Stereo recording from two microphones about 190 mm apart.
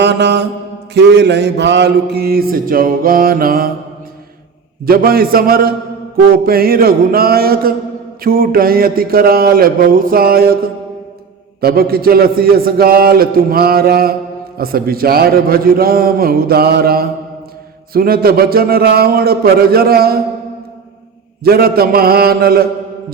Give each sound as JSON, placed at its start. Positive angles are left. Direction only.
{"t": 0.0, "sound": "mantra", "side_deg": -65}
{"t": 4.9, "sound": "a man's voice", "side_deg": -50}
{"t": 21.4, "sound": "a man's voice", "side_deg": -55}